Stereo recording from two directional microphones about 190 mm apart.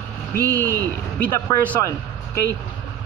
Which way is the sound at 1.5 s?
10° left (ahead or behind).